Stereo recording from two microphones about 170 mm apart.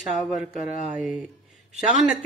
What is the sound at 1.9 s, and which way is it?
Speech, centre (ahead or behind).